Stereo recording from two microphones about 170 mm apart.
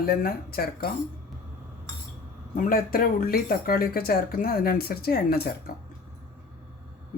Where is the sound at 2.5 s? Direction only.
55° left (ahead or behind).